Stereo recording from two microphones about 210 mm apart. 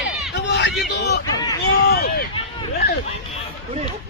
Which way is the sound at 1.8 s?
45° left (ahead or behind).